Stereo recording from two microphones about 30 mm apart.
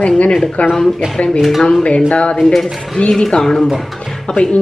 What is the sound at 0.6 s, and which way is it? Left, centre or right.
Speech, left.